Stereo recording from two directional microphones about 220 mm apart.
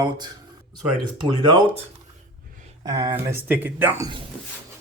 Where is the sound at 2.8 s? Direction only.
15° right (ahead or behind).